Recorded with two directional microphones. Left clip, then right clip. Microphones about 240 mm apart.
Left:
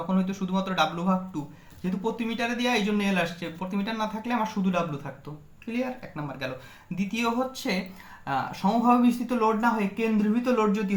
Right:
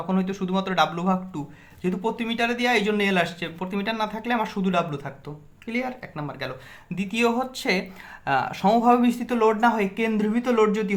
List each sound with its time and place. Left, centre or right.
0.1 s speech: right